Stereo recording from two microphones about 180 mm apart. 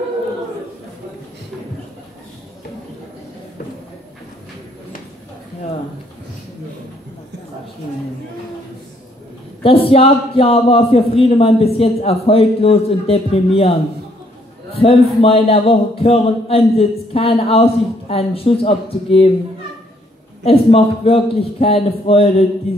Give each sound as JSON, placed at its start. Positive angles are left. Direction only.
{"t": 9.6, "sound": "a man's voice", "side_deg": 30}
{"t": 14.8, "sound": "a man's voice", "side_deg": 30}
{"t": 20.4, "sound": "a man's voice", "side_deg": 30}